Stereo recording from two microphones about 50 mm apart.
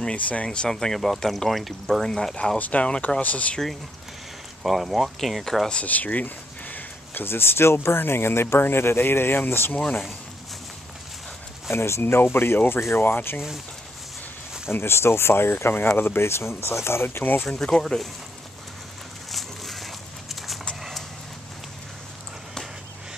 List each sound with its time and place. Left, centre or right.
0.1 s speech: left; by 2.3 s centre
2.6 s speech: left
4.6 s speech: centre
5.9 s a sound: left
7.2 s speech: left
9.8 s speech: left
11.7 s speech: left
12.0 s speech: left
14.7 s speech: left
17.2 s speech: left
17.5 s speech: centre
19.3 s a sound: centre